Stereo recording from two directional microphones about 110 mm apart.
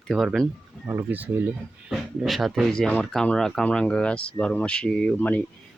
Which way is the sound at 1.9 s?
Centre (ahead or behind).